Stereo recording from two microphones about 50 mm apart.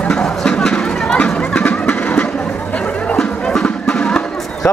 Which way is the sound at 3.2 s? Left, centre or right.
Centre.